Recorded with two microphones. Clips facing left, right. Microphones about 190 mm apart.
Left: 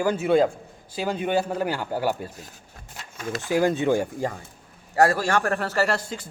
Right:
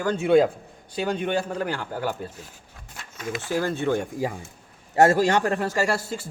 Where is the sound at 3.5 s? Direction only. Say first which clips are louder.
Left 4 dB; 15° left (ahead or behind).